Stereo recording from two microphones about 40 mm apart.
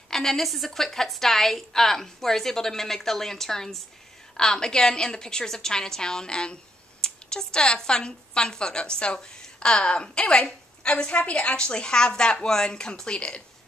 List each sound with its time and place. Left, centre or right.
0.1 s a woman's voice: centre